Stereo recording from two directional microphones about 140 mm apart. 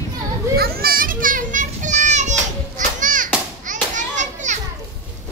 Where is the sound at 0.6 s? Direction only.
90° right.